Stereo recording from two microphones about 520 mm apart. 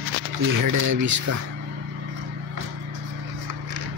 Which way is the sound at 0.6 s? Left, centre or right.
Right.